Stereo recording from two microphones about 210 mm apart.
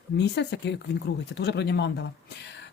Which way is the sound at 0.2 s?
55° left (ahead or behind).